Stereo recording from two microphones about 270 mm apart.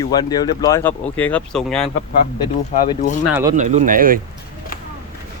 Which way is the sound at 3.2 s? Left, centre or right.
Centre.